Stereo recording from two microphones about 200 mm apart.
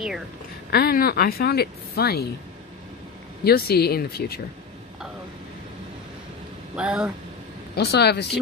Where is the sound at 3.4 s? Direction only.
50° left (ahead or behind).